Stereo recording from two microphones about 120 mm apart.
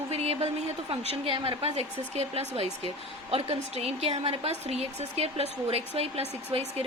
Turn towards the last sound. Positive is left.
turn(degrees=-55)  # may be behind; listen again after turning